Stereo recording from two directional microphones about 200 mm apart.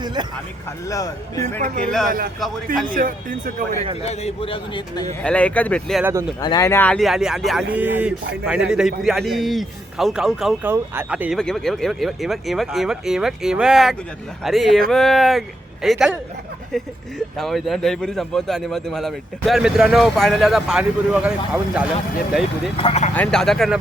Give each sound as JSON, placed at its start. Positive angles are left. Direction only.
{"t": 0.0, "sound": "speech", "side_deg": -20}
{"t": 0.9, "sound": "speech", "side_deg": 15}
{"t": 2.0, "sound": "speech", "side_deg": -45}
{"t": 4.0, "sound": "a man's voice", "side_deg": 30}
{"t": 5.2, "sound": "speech", "side_deg": 5}
{"t": 6.0, "sound": "speech", "side_deg": -10}
{"t": 6.4, "sound": "a man's voice", "side_deg": 20}
{"t": 22.8, "sound": "speech", "side_deg": 30}
{"t": 23.1, "sound": "a man's voice", "side_deg": 5}